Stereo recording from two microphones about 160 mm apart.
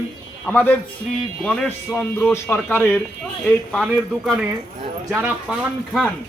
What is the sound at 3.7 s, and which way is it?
A man's voice, centre (ahead or behind).